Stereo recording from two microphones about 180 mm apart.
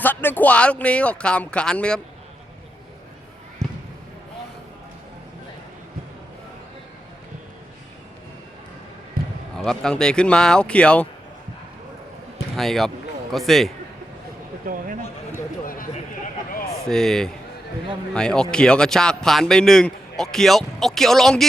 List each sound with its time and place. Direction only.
0.0 s speech: 10° left (ahead or behind)
3.6 s basketball bounce: 20° right (ahead or behind)
9.2 s basketball bounce: 50° right (ahead or behind)
9.6 s a man's voice: 5° left (ahead or behind)
12.5 s a man's voice: centre (ahead or behind)
14.6 s a sound: 50° right (ahead or behind)
15.6 s a sound: 50° left (ahead or behind)
16.9 s a man's voice: 5° left (ahead or behind)